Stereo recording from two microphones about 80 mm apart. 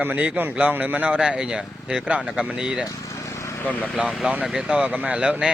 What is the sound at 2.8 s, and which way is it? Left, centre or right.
Vehicle, left.